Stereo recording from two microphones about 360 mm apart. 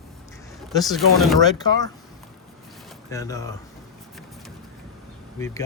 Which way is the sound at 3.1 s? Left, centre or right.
Centre.